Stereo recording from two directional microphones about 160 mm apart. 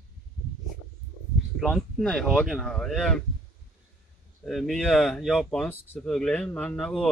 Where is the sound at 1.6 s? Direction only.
Centre (ahead or behind).